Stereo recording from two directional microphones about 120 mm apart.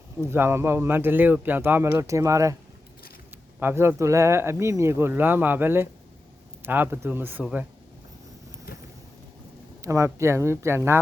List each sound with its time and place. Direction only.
0.2 s speech: 20° right (ahead or behind)
3.6 s speech: 20° right (ahead or behind)
9.8 s speech: 25° right (ahead or behind)